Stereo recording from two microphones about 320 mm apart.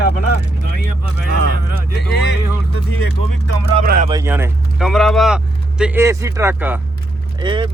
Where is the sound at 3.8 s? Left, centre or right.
Right.